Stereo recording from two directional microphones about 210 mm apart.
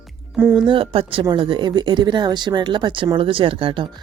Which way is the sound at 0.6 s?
25° right (ahead or behind).